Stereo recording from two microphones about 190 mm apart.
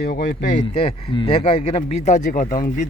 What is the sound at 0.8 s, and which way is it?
Speech, 30° left (ahead or behind).